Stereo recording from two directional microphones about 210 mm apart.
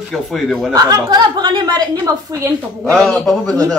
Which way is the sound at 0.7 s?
15° right (ahead or behind).